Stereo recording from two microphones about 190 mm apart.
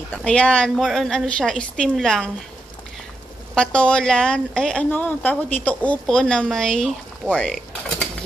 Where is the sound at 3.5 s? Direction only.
5° left (ahead or behind).